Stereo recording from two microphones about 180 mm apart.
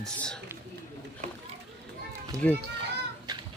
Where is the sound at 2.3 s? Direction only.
20° right (ahead or behind).